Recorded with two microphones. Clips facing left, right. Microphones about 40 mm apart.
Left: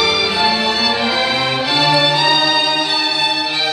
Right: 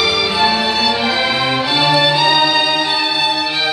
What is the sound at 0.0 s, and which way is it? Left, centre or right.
Music, centre.